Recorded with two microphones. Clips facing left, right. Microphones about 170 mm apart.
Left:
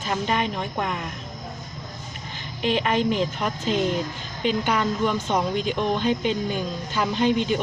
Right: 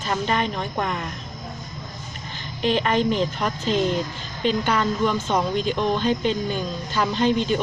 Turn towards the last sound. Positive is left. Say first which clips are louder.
# right 1 dB
turn(degrees=10)  # may be behind; listen again after turning